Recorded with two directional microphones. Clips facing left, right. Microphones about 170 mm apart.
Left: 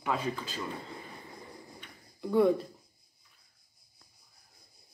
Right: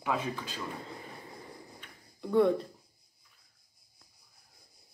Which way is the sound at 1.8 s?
Centre (ahead or behind).